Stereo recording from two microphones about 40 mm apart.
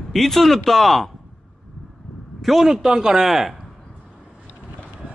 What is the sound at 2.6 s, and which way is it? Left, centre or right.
Speech, centre.